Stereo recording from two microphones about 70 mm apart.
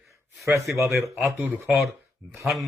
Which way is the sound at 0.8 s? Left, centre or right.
Right.